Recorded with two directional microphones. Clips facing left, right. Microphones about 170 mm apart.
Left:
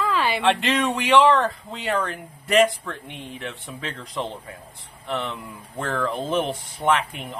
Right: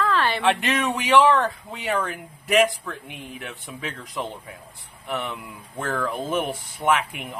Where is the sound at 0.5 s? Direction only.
5° right (ahead or behind).